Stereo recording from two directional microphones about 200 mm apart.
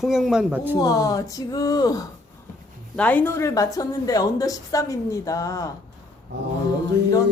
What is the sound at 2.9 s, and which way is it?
A woman's voice, 5° left (ahead or behind).